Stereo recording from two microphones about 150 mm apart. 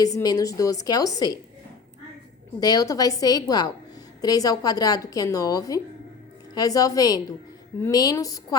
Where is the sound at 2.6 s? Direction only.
25° left (ahead or behind).